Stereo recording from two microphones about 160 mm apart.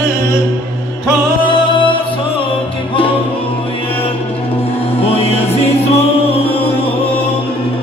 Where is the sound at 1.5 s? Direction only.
30° left (ahead or behind).